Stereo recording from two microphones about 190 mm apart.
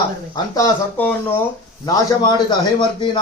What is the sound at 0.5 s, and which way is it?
Speech, 15° left (ahead or behind).